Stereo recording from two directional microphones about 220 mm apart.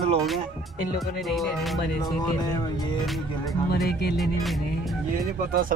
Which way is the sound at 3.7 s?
45° left (ahead or behind).